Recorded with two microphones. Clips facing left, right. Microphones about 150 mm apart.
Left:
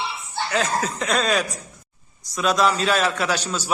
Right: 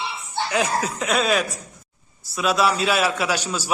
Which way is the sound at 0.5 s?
10° right (ahead or behind).